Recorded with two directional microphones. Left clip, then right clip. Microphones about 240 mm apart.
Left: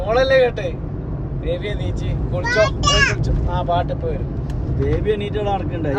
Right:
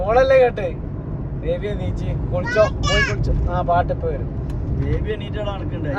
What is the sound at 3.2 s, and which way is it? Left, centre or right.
Speech, centre.